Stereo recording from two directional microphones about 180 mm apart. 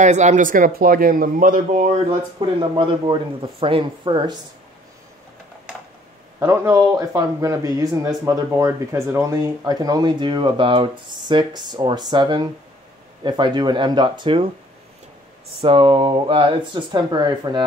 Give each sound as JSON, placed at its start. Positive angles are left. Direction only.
{"t": 0.0, "sound": "speech", "side_deg": -40}
{"t": 2.7, "sound": "speech", "side_deg": -25}
{"t": 6.4, "sound": "speech", "side_deg": -15}
{"t": 15.6, "sound": "speech", "side_deg": -30}